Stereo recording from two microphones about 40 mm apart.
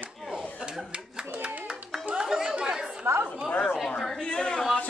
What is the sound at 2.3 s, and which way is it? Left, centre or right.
Chatter, centre.